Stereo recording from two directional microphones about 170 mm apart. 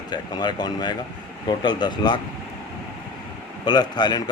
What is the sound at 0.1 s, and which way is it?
A man's voice, 25° left (ahead or behind).